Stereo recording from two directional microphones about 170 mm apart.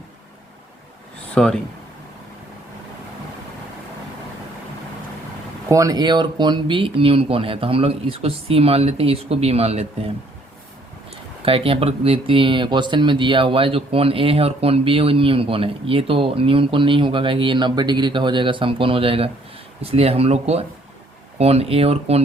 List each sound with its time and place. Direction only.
1.3 s speech: 5° left (ahead or behind)
5.6 s speech: 20° right (ahead or behind); by 10.1 s 35° right (ahead or behind)
11.1 s speech: 35° right (ahead or behind)